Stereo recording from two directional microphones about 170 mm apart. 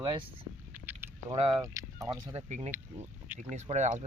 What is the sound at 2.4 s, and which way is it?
Speech, 40° right (ahead or behind).